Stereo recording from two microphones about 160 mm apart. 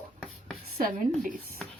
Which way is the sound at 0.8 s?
55° right (ahead or behind).